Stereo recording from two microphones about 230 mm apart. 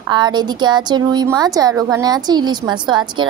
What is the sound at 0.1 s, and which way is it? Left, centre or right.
A woman's voice, centre.